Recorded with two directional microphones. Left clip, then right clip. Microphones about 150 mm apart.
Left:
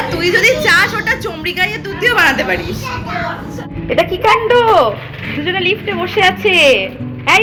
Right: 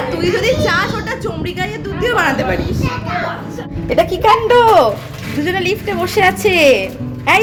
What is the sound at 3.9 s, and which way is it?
Speech, 25° right (ahead or behind).